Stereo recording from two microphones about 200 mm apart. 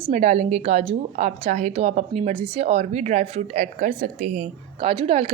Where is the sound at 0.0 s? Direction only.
35° right (ahead or behind).